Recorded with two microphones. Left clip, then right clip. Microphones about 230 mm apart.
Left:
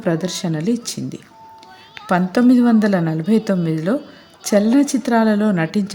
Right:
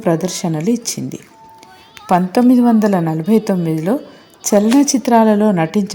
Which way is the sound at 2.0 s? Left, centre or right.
Centre.